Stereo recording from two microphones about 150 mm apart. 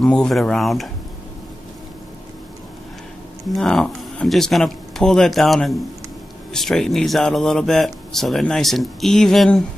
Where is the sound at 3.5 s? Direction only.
5° left (ahead or behind).